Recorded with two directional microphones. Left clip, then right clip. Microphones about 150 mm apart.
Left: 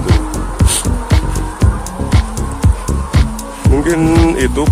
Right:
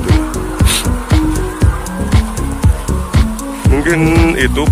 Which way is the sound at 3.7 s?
20° left (ahead or behind).